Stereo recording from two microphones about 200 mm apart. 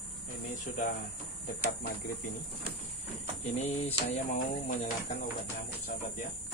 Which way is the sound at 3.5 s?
35° left (ahead or behind).